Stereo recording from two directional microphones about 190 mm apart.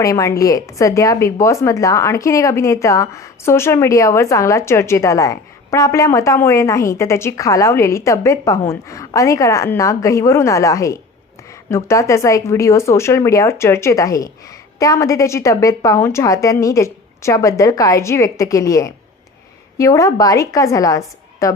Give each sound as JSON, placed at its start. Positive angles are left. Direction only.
{"t": 0.0, "sound": "a woman's voice", "side_deg": 15}